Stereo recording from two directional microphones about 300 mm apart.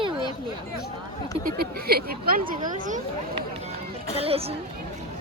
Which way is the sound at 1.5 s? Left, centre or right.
Right.